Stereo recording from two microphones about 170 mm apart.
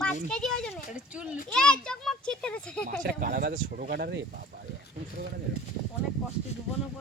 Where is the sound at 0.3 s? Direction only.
5° left (ahead or behind).